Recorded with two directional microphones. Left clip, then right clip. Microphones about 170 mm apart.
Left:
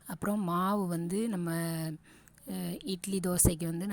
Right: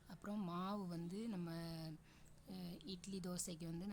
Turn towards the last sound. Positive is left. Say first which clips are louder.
# left 18 dB
turn(degrees=45)  # may be behind; listen again after turning